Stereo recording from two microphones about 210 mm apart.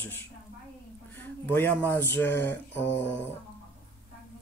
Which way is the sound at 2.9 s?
55° left (ahead or behind).